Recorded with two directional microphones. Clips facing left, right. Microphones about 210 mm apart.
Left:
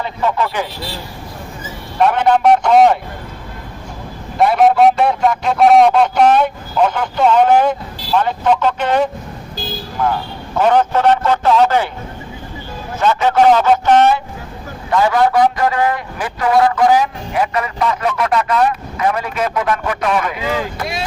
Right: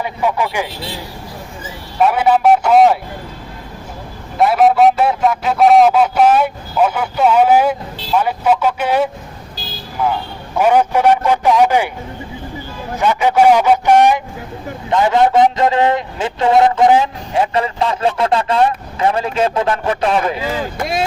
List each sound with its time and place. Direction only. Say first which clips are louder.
0.0 s a man's voice: even; 10° right (ahead or behind)
2.0 s a man's voice: even; 5° right (ahead or behind)
4.4 s a man's voice: even; centre (ahead or behind)
13.0 s a man's voice: even; 15° right (ahead or behind); by 20.4 s 30° right (ahead or behind)